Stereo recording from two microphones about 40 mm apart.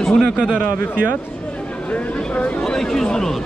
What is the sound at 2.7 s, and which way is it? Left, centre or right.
Speech, centre.